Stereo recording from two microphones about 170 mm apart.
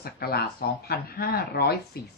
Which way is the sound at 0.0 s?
65° left (ahead or behind).